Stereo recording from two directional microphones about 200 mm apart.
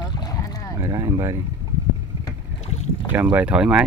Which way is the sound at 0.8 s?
15° right (ahead or behind).